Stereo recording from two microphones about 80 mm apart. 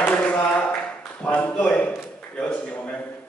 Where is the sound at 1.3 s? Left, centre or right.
Centre.